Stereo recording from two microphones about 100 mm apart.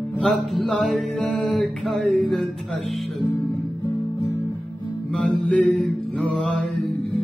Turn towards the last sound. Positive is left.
turn(degrees=10)  # may be behind; listen again after turning